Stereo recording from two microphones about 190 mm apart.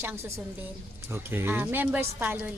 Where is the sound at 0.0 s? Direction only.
15° right (ahead or behind).